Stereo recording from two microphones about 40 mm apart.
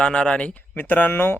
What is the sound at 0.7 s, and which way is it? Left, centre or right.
Speech, left.